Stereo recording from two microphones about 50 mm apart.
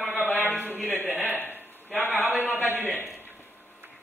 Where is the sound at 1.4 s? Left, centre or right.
Left.